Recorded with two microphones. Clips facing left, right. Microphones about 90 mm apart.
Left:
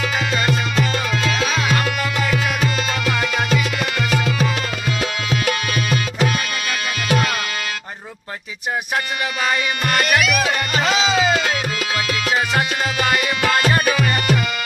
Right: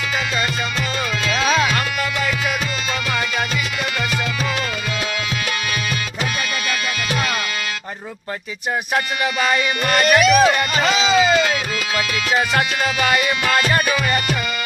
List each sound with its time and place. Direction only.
0.4 s music: 40° left (ahead or behind)
3.2 s music: 50° left (ahead or behind)
10.0 s speech: 35° right (ahead or behind)
11.0 s music: 35° left (ahead or behind)
13.7 s music: 20° left (ahead or behind)